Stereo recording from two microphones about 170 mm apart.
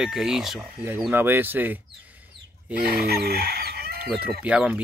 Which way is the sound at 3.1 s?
65° right (ahead or behind).